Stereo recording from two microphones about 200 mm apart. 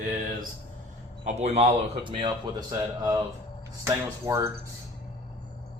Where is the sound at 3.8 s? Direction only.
15° right (ahead or behind).